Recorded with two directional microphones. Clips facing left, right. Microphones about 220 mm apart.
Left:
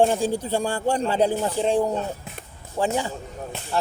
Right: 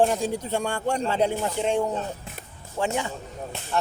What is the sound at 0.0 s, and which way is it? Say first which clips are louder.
A man's voice: left 2 dB; 30° left (ahead or behind).